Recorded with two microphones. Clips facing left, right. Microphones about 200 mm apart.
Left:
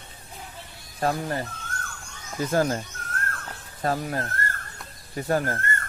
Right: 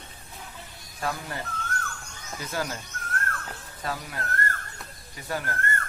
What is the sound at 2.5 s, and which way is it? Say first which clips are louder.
Speech: left 9 dB; 45° left (ahead or behind).